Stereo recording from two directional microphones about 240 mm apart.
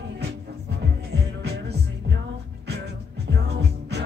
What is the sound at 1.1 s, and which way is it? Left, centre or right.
Music, right.